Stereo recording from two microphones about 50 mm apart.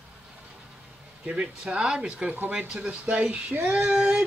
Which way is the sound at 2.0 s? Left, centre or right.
Right.